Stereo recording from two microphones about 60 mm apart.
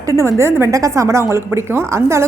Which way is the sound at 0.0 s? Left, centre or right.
Right.